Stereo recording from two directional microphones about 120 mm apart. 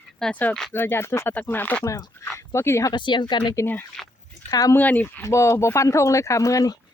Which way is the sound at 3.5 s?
20° left (ahead or behind).